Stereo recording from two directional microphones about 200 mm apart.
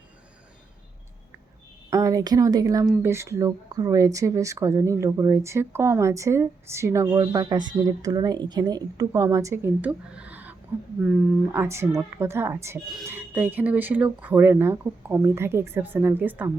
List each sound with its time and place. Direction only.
1.9 s speech: 15° right (ahead or behind)